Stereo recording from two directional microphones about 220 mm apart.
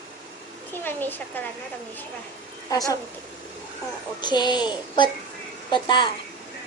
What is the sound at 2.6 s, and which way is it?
Speech, 15° left (ahead or behind).